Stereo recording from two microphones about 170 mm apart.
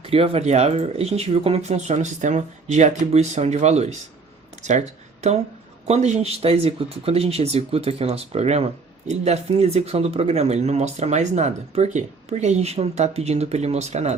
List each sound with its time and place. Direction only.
0.0 s speech: 35° right (ahead or behind)
5.9 s speech: 40° right (ahead or behind)